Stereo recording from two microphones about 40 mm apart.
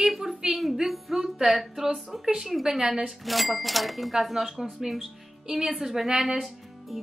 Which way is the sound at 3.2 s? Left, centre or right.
Centre.